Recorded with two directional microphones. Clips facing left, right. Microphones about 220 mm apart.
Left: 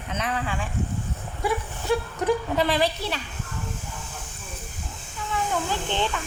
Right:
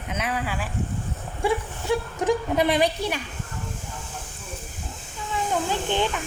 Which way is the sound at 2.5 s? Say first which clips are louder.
Right 2 dB; 20° right (ahead or behind).